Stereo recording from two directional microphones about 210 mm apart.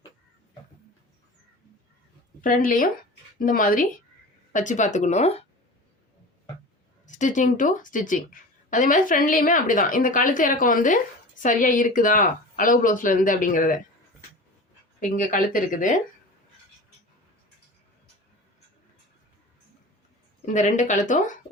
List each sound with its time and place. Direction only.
2.4 s a woman's voice: 40° left (ahead or behind)
7.2 s a woman's voice: 35° left (ahead or behind)
15.0 s a woman's voice: 40° left (ahead or behind)
20.4 s a woman's voice: 35° left (ahead or behind)